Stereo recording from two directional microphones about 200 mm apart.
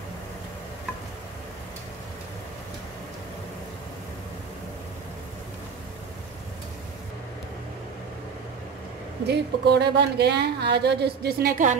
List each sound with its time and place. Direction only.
9.2 s speech: 55° right (ahead or behind); by 11.8 s 40° right (ahead or behind)